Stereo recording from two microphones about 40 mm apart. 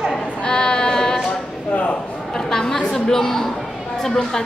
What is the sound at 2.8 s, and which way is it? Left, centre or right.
A woman's voice, centre.